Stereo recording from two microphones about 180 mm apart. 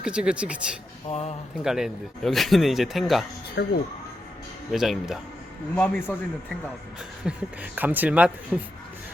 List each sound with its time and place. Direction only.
0.0 s speech: 5° right (ahead or behind)
1.1 s speech: 35° left (ahead or behind)
1.6 s speech: centre (ahead or behind)
3.6 s speech: 70° left (ahead or behind)
4.7 s speech: centre (ahead or behind)
5.7 s a man's voice: 10° left (ahead or behind)
7.3 s speech: 10° right (ahead or behind)